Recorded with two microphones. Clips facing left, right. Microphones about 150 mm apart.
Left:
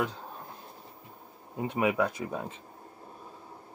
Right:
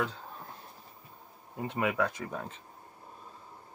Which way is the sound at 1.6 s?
15° left (ahead or behind).